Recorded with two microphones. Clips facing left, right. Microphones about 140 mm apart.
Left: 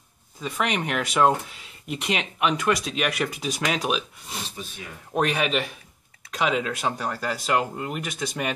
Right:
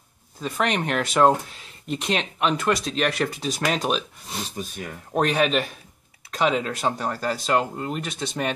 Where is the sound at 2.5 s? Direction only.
30° right (ahead or behind).